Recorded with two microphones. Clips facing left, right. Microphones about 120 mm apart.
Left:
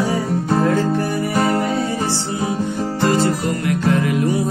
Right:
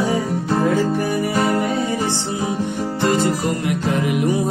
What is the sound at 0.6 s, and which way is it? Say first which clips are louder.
Music: right 1 dB; 15° right (ahead or behind).